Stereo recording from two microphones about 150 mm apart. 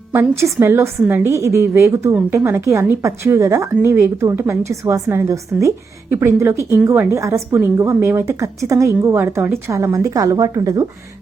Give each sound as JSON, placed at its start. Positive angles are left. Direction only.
{"t": 0.1, "sound": "a woman's voice", "side_deg": -15}